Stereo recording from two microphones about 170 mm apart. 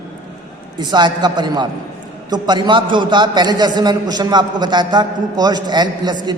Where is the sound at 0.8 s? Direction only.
25° right (ahead or behind).